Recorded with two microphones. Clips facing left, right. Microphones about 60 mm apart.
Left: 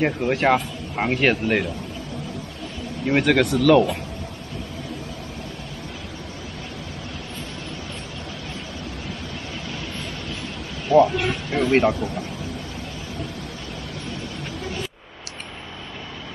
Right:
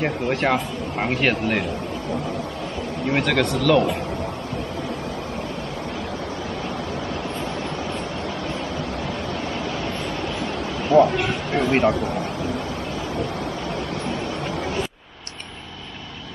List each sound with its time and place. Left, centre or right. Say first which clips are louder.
0.0 s speech: left 2 dB; centre
3.1 s speech: left 3 dB; centre
10.9 s a sound: even; centre
11.9 s speech: right 3 dB; right